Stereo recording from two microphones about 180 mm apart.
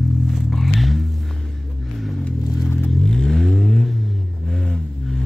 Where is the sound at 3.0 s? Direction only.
Centre (ahead or behind).